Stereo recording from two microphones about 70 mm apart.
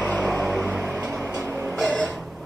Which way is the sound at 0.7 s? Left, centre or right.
Right.